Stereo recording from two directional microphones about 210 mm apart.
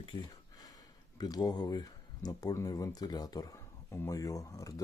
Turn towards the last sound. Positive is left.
turn(degrees=15)  # may be behind; listen again after turning